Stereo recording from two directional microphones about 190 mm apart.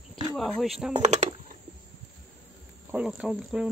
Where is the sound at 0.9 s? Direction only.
35° right (ahead or behind).